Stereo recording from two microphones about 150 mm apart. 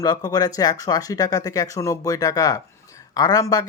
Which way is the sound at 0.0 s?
25° left (ahead or behind).